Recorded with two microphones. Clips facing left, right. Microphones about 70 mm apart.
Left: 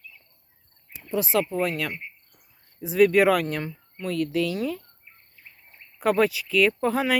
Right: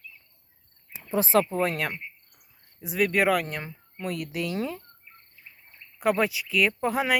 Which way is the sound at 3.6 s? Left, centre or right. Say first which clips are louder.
Left 2 dB; centre.